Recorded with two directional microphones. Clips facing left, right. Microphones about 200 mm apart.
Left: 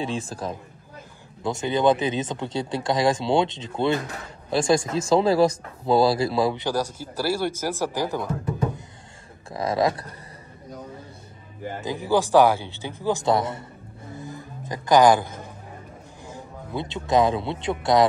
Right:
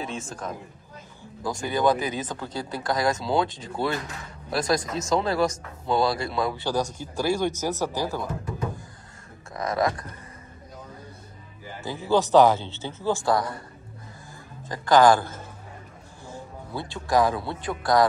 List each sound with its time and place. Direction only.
0.0 s speech: 35° left (ahead or behind)
6.5 s speech: 15° left (ahead or behind)
9.5 s a sound: 30° left (ahead or behind)
11.8 s speech: 15° left (ahead or behind)
14.1 s music: 20° left (ahead or behind)
16.3 s speech: 20° left (ahead or behind)